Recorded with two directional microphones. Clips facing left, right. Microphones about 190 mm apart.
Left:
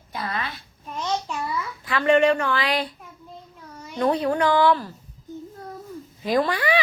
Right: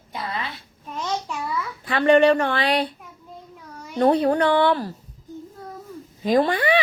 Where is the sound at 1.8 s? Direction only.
30° right (ahead or behind).